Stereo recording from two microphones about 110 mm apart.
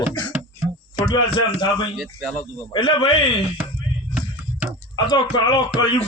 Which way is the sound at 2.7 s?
45° left (ahead or behind).